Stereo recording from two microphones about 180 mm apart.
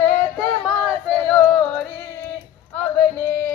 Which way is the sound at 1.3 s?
Centre (ahead or behind).